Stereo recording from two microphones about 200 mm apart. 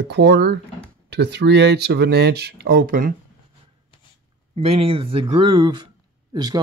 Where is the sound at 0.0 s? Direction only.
60° right (ahead or behind).